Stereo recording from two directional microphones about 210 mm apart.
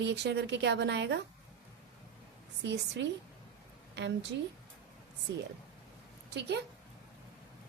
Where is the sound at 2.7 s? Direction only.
55° right (ahead or behind).